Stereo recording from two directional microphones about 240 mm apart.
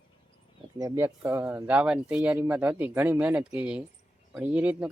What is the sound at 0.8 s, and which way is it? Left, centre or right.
Speech, centre.